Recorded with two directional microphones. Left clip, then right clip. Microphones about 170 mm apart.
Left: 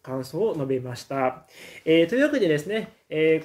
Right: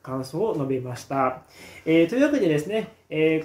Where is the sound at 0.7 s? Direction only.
15° left (ahead or behind).